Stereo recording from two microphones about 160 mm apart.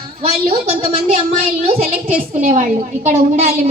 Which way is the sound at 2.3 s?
55° right (ahead or behind).